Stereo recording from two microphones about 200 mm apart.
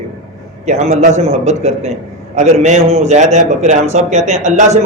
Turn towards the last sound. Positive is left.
turn(degrees=-35)  # may be behind; listen again after turning